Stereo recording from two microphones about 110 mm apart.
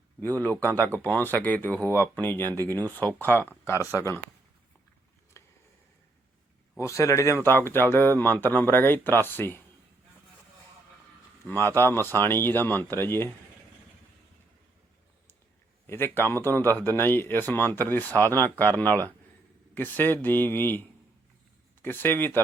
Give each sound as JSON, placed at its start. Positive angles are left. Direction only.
{"t": 0.2, "sound": "speech", "side_deg": 15}
{"t": 1.8, "sound": "speech", "side_deg": -25}
{"t": 2.2, "sound": "speech", "side_deg": 20}
{"t": 5.4, "sound": "a sound", "side_deg": 25}
{"t": 6.7, "sound": "speech", "side_deg": 25}
{"t": 11.4, "sound": "speech", "side_deg": 20}
{"t": 15.9, "sound": "speech", "side_deg": 20}